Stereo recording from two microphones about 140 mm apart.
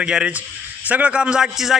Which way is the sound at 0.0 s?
5° right (ahead or behind).